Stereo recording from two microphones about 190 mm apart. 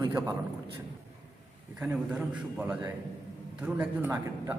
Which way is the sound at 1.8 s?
5° right (ahead or behind).